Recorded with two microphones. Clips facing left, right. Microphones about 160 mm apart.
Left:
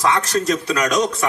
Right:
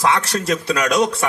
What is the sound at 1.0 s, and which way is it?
Speech, 30° right (ahead or behind).